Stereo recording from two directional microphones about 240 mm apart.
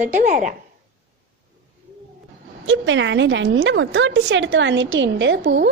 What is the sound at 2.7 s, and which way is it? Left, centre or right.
A woman's voice, right.